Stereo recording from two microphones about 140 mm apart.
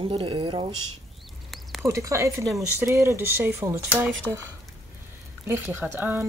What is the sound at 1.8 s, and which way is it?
Speech, 25° right (ahead or behind).